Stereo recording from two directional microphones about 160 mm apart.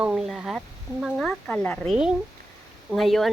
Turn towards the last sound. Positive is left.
turn(degrees=0)  # may be behind; listen again after turning